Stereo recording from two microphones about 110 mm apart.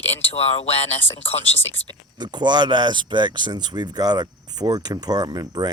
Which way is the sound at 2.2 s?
40° right (ahead or behind).